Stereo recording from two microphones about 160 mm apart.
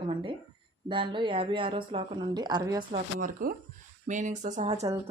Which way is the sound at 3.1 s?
60° right (ahead or behind).